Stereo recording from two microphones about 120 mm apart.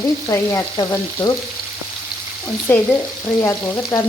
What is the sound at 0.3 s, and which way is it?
Frying, 25° left (ahead or behind).